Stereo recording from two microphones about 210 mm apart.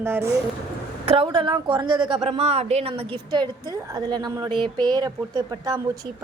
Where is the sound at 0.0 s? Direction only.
10° right (ahead or behind).